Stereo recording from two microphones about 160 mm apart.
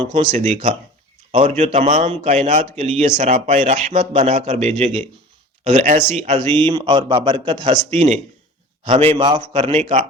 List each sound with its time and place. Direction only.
0.0 s a man's voice: 35° right (ahead or behind)
0.3 s a man's voice: 45° right (ahead or behind)